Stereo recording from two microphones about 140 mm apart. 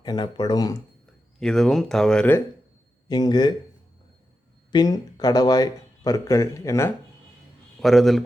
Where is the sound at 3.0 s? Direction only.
30° left (ahead or behind).